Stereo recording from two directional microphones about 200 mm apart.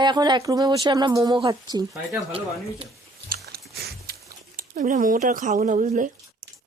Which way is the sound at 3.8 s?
50° right (ahead or behind).